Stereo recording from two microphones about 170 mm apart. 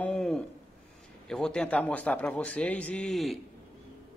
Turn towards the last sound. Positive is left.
turn(degrees=0)  # may be behind; listen again after turning